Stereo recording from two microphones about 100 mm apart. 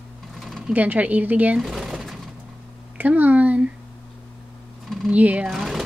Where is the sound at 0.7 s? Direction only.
15° right (ahead or behind).